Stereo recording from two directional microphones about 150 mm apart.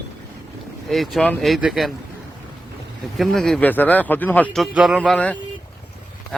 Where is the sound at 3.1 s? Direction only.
Centre (ahead or behind).